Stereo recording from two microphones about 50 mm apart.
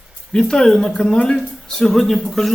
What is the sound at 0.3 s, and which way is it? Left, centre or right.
Speech, centre.